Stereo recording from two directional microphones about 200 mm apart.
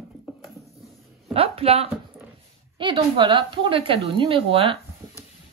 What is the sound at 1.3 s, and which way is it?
Speech, 30° right (ahead or behind).